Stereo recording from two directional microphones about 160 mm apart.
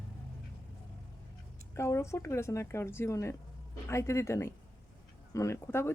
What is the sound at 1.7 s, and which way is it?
Speech, 20° left (ahead or behind).